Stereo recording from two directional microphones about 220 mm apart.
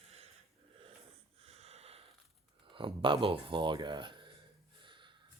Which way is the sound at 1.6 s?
30° right (ahead or behind).